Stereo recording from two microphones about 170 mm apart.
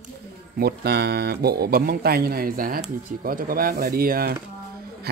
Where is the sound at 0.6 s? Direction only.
70° right (ahead or behind).